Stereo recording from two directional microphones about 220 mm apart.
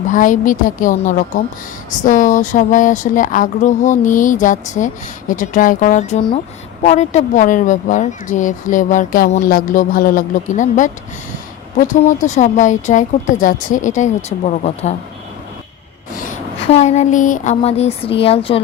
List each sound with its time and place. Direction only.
0.1 s speech: 35° left (ahead or behind)
16.7 s speech: 30° left (ahead or behind)